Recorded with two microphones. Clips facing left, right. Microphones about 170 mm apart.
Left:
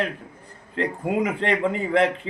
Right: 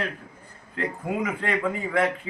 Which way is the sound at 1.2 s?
25° left (ahead or behind).